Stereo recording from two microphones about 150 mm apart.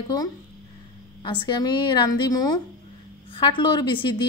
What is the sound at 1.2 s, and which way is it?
A woman's voice, 35° left (ahead or behind).